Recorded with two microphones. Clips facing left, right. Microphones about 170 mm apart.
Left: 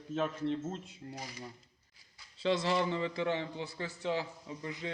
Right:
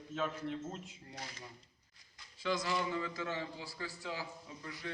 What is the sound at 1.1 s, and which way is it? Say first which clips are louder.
Speech: left 3 dB; 10° left (ahead or behind).